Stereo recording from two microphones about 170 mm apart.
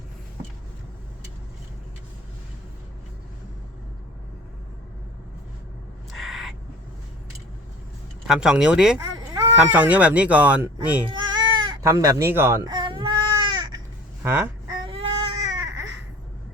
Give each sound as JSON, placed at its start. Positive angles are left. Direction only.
{"t": 6.1, "sound": "owl", "side_deg": 0}
{"t": 8.3, "sound": "speech", "side_deg": -5}
{"t": 9.0, "sound": "a sound", "side_deg": -20}
{"t": 9.6, "sound": "speech", "side_deg": -10}
{"t": 11.1, "sound": "baby cry", "side_deg": -25}
{"t": 14.2, "sound": "a sound", "side_deg": -15}
{"t": 14.8, "sound": "baby cry", "side_deg": -30}